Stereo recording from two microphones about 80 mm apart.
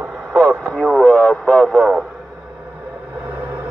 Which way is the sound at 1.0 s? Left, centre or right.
Centre.